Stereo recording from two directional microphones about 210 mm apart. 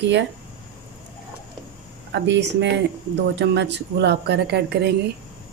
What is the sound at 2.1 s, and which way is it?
Speech, 55° right (ahead or behind).